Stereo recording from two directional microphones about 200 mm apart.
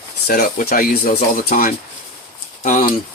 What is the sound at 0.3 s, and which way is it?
Speech, 50° left (ahead or behind).